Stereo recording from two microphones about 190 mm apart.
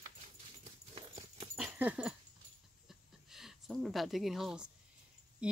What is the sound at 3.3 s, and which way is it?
Speech, centre (ahead or behind).